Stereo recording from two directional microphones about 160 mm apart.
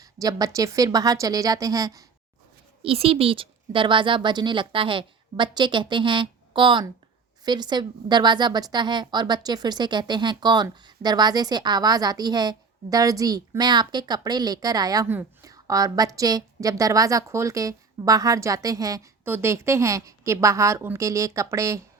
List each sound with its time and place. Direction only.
0.0 s a woman's voice: 20° right (ahead or behind)
2.8 s a woman's voice: 35° right (ahead or behind); by 21.8 s 20° right (ahead or behind)